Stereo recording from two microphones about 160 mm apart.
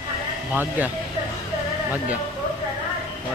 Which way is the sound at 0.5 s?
10° right (ahead or behind).